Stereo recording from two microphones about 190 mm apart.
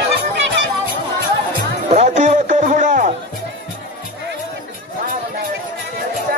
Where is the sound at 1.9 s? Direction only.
40° right (ahead or behind).